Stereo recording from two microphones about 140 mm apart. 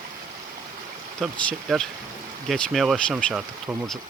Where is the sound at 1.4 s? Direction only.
5° left (ahead or behind).